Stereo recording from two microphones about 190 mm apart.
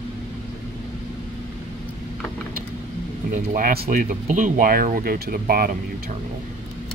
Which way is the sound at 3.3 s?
45° right (ahead or behind).